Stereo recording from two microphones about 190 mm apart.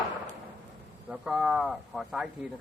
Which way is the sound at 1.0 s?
5° right (ahead or behind).